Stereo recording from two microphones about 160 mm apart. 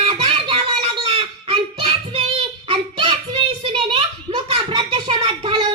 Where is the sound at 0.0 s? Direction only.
35° right (ahead or behind).